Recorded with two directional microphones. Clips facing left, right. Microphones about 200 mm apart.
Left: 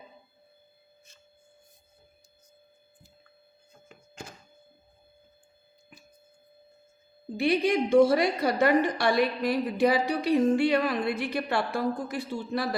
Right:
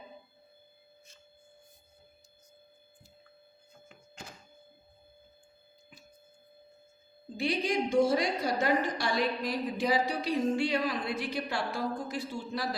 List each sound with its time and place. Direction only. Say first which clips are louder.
7.3 s a woman's voice: left 6 dB; 65° left (ahead or behind)